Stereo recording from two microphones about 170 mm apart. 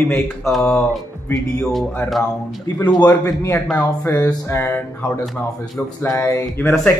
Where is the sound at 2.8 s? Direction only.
25° left (ahead or behind).